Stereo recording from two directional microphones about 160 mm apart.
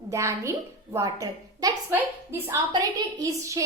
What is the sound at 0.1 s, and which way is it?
A woman's voice, 20° right (ahead or behind).